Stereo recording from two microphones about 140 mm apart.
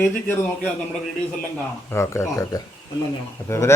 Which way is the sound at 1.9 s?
20° left (ahead or behind).